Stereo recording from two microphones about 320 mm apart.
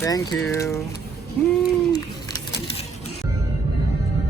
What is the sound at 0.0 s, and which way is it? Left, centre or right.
Speech, centre.